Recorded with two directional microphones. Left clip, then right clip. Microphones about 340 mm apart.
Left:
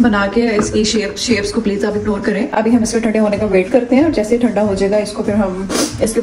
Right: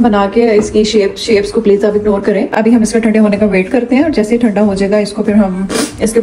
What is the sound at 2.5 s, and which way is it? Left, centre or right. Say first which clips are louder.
Speech: right 4 dB; right.